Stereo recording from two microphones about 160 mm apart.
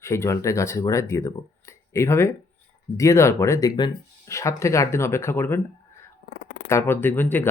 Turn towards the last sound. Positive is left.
turn(degrees=10)  # may be behind; listen again after turning